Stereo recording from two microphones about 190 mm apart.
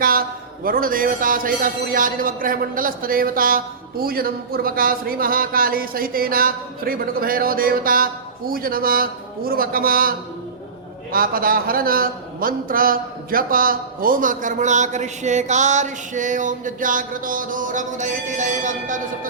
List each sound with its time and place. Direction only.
0.0 s a man's voice: 50° right (ahead or behind)